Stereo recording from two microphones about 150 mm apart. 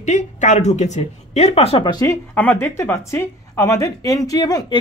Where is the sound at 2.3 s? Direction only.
10° left (ahead or behind).